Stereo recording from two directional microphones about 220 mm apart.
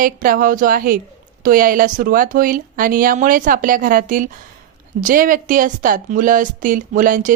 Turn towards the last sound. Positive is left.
turn(degrees=-35)  # may be behind; listen again after turning